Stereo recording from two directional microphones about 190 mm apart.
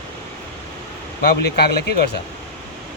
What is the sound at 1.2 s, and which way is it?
Speech, 60° left (ahead or behind).